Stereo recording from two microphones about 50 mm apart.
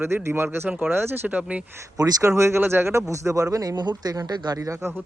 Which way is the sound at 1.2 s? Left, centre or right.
Right.